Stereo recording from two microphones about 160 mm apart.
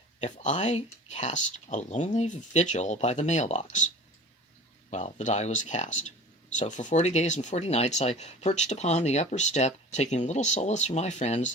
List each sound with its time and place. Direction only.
0.2 s speech: 50° left (ahead or behind)
4.9 s speech: 45° left (ahead or behind)